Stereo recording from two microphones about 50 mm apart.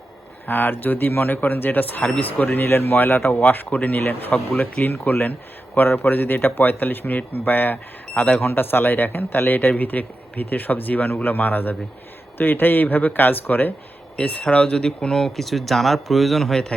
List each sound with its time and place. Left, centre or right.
0.4 s a man's voice: left
14.2 s speech: left
14.5 s speech: centre